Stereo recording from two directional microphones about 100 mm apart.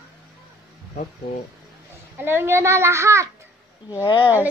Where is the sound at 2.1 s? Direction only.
20° right (ahead or behind).